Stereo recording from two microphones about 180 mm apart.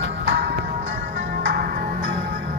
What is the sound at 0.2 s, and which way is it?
Music, 75° right (ahead or behind).